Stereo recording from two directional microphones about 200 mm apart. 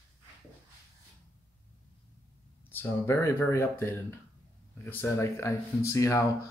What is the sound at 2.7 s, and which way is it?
Speech, 10° left (ahead or behind).